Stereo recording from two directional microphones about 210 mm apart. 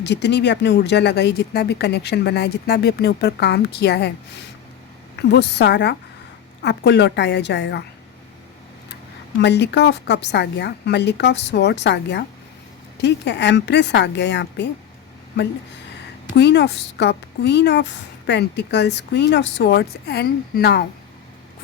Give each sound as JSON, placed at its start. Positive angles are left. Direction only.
{"t": 0.0, "sound": "speech", "side_deg": 55}
{"t": 5.3, "sound": "speech", "side_deg": 55}
{"t": 9.4, "sound": "a woman's voice", "side_deg": 55}
{"t": 16.3, "sound": "speech", "side_deg": 55}